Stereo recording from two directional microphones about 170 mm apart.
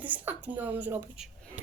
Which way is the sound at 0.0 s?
10° right (ahead or behind).